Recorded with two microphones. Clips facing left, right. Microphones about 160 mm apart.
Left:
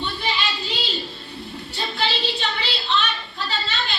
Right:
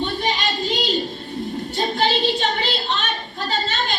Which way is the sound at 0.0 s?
45° right (ahead or behind).